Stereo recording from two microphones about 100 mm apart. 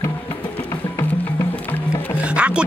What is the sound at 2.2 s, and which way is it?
Music, 10° right (ahead or behind).